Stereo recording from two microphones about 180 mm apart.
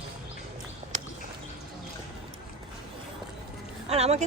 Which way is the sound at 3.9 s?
35° right (ahead or behind).